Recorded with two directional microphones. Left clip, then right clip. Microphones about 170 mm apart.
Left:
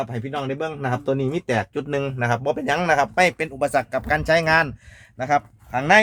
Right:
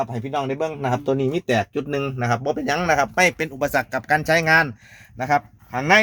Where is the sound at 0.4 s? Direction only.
10° left (ahead or behind).